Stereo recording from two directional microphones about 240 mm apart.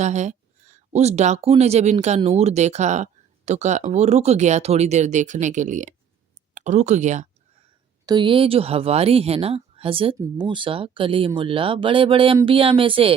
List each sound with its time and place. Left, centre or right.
0.0 s speech: right
8.0 s speech: centre